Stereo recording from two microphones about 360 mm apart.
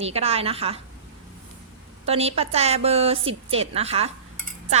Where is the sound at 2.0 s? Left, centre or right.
Centre.